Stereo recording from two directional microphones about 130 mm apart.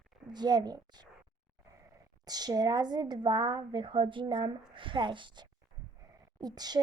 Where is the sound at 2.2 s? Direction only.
30° right (ahead or behind).